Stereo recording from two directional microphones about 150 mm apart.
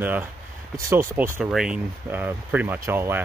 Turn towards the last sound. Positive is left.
turn(degrees=-15)  # may be behind; listen again after turning